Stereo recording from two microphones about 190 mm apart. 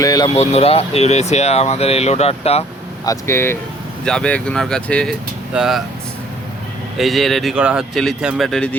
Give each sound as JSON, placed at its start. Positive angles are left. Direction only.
{"t": 0.0, "sound": "speech", "side_deg": 20}
{"t": 0.3, "sound": "speech", "side_deg": 30}
{"t": 3.1, "sound": "speech", "side_deg": 15}
{"t": 6.9, "sound": "speech", "side_deg": 0}